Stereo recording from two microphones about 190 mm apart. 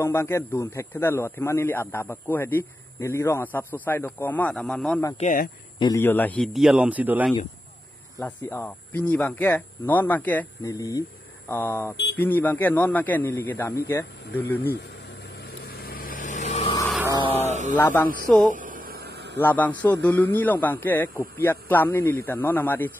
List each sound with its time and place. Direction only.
0.0 s speech: 15° left (ahead or behind)
5.1 s speech: 45° left (ahead or behind)
5.8 s a man's voice: 15° left (ahead or behind); by 7.3 s 10° right (ahead or behind)
8.2 s speech: 10° left (ahead or behind)
15.3 s vehicle: 55° left (ahead or behind); by 16.7 s 40° left (ahead or behind)
17.5 s a sound: 40° right (ahead or behind)
17.7 s speech: 10° left (ahead or behind)
18.5 s a sound: 45° right (ahead or behind)
19.4 s speech: 10° left (ahead or behind)